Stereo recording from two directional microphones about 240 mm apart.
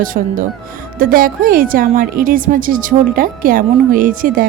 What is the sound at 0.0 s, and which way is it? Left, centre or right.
A woman's voice, right.